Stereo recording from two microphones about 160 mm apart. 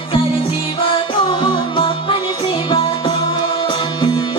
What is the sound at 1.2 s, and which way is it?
Music, 30° left (ahead or behind).